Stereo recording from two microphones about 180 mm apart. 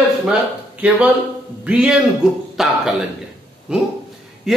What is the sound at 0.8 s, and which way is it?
A man's voice, 10° right (ahead or behind).